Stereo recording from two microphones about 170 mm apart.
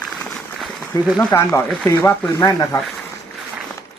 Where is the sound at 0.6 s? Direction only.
Centre (ahead or behind).